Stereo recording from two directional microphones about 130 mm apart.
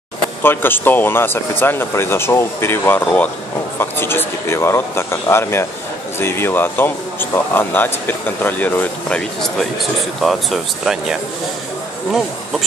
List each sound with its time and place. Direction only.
0.4 s speech: 15° left (ahead or behind)
10.2 s speech: centre (ahead or behind)